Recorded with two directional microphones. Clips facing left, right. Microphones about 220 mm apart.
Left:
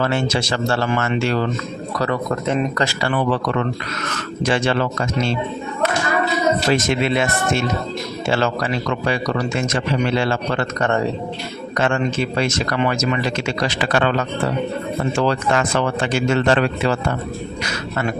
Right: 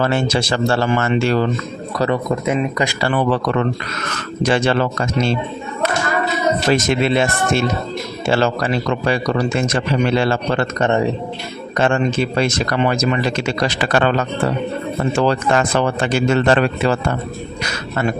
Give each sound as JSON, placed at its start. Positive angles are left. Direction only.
{"t": 0.0, "sound": "speech", "side_deg": -35}
{"t": 2.3, "sound": "speech", "side_deg": -10}
{"t": 4.4, "sound": "speech", "side_deg": -40}
{"t": 6.7, "sound": "speech", "side_deg": -30}
{"t": 11.8, "sound": "speech", "side_deg": -30}
{"t": 15.2, "sound": "speech", "side_deg": -35}